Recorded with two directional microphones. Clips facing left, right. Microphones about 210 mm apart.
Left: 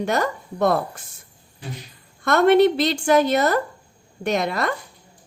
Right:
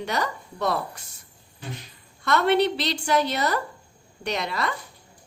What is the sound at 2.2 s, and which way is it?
A woman's voice, 50° left (ahead or behind).